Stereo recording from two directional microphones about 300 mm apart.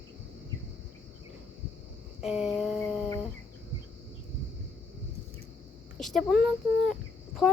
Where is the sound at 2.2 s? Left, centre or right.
Centre.